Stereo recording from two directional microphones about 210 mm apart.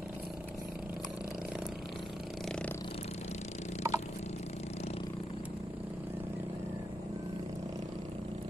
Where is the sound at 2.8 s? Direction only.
25° left (ahead or behind).